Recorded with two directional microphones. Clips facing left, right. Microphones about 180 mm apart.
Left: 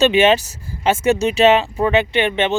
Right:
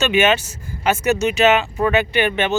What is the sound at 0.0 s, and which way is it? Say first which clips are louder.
Speech: left 4 dB; 30° left (ahead or behind).